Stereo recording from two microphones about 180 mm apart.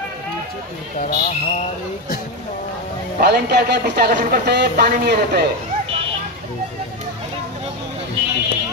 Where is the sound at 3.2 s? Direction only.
65° right (ahead or behind).